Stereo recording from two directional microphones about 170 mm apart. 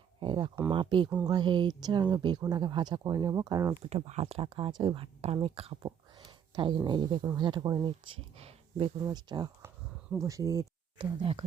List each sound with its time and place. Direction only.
0.2 s speech: 25° right (ahead or behind)
3.8 s speech: 40° right (ahead or behind)
9.0 s speech: 25° right (ahead or behind)
11.2 s speech: 30° right (ahead or behind)